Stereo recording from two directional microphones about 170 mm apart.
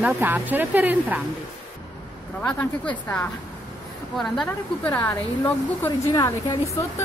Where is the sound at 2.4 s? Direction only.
10° left (ahead or behind).